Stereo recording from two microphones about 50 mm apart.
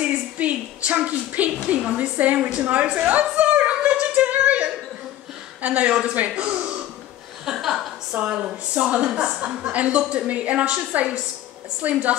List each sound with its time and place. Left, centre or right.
0.1 s a sound: right
2.0 s a woman's voice: right
3.8 s a capella: right
5.6 s a woman's voice: right
7.4 s a sound: centre
8.1 s a woman's voice: right
11.9 s a woman's voice: right